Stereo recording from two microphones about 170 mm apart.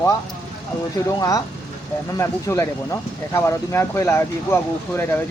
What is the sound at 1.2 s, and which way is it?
Speech, 20° left (ahead or behind).